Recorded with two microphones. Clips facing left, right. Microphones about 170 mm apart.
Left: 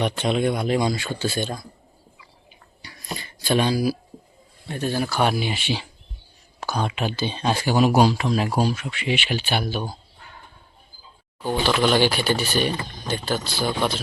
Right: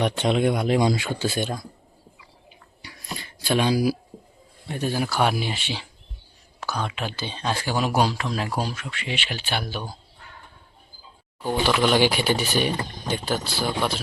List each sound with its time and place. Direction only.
0.2 s speech: 15° right (ahead or behind)
3.4 s speech: 5° right (ahead or behind)
6.6 s speech: 15° left (ahead or behind)
8.7 s speech: 15° left (ahead or behind)
11.4 s speech: 10° right (ahead or behind)